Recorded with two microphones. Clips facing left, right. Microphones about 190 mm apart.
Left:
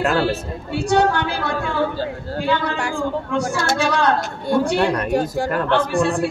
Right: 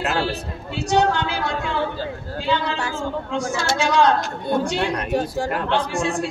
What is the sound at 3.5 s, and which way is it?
A man's voice, 55° left (ahead or behind).